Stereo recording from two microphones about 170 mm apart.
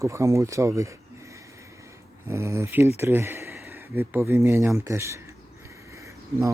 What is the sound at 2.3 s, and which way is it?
Speech, 15° right (ahead or behind).